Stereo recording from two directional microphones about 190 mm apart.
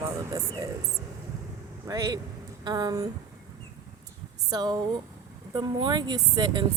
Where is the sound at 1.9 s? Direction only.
15° right (ahead or behind).